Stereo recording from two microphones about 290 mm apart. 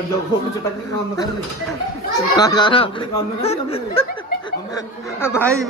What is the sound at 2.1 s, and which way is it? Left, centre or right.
Speech, centre.